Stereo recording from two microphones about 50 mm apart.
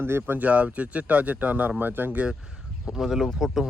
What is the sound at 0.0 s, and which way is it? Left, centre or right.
Speech, right.